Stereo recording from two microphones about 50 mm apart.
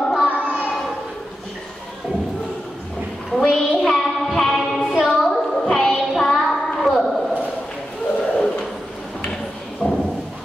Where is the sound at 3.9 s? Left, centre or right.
Centre.